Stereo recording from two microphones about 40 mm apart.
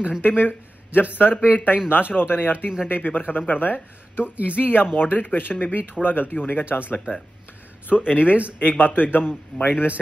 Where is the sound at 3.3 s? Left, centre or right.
Left.